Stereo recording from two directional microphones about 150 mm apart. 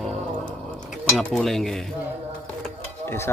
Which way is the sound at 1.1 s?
Centre (ahead or behind).